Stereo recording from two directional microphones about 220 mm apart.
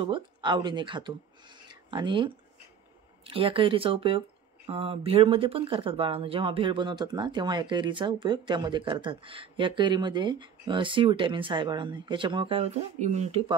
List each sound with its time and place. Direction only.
0.0 s speech: 20° right (ahead or behind)